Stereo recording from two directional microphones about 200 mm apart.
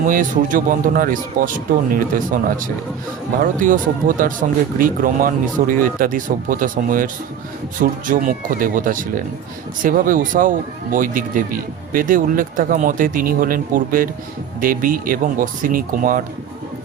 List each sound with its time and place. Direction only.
0.0 s speech: 40° right (ahead or behind)